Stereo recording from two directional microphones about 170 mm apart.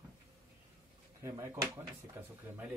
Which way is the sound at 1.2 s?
15° right (ahead or behind).